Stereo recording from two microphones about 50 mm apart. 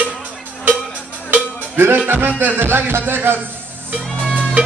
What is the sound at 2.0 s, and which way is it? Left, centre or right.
Music, right.